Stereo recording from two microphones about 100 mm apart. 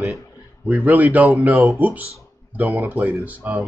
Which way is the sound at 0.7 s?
15° right (ahead or behind).